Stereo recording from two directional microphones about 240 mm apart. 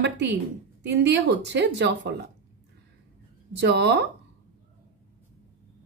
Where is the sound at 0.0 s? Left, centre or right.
Right.